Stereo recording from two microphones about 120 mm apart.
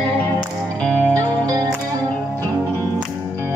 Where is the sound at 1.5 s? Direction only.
30° right (ahead or behind).